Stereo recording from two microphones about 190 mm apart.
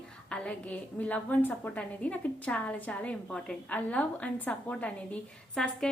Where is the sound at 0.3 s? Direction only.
5° left (ahead or behind).